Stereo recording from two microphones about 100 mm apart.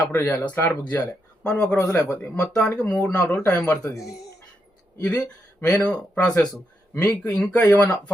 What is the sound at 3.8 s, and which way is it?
Speech, 35° left (ahead or behind).